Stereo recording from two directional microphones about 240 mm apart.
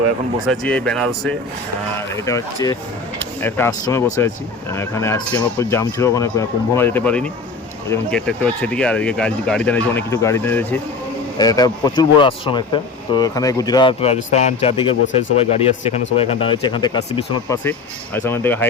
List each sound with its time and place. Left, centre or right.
0.4 s speech: centre; by 14.9 s left
15.0 s speech: left
15.4 s speech: left; by 18.7 s centre